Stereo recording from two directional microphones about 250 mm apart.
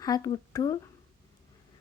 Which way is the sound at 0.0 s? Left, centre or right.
Centre.